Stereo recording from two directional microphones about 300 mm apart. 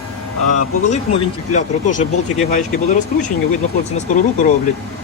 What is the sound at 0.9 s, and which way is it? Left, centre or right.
Speech, left.